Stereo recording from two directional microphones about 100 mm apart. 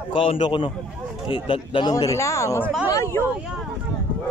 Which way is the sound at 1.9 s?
30° left (ahead or behind).